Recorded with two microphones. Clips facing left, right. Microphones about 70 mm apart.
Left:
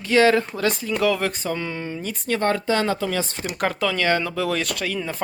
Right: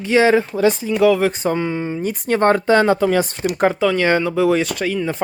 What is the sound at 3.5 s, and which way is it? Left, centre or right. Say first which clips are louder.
Speech: right 7 dB; right.